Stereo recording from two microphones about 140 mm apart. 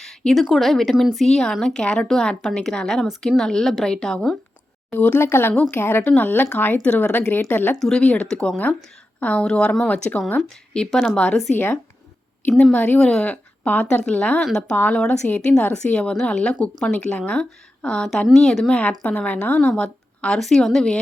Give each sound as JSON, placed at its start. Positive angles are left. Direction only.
{"t": 0.0, "sound": "speech", "side_deg": 0}
{"t": 4.9, "sound": "a woman's voice", "side_deg": 15}
{"t": 12.7, "sound": "a woman's voice", "side_deg": 10}